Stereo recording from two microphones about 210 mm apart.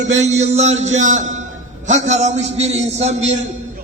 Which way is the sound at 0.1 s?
35° right (ahead or behind).